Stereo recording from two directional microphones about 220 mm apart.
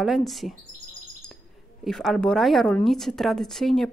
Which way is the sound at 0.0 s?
Centre (ahead or behind).